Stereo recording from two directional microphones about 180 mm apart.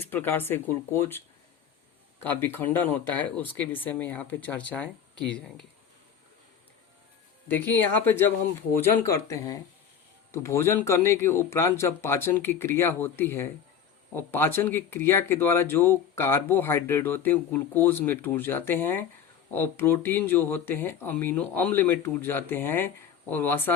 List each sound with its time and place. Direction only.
0.0 s speech: 10° left (ahead or behind)
2.2 s speech: 10° left (ahead or behind)
7.4 s speech: 10° left (ahead or behind)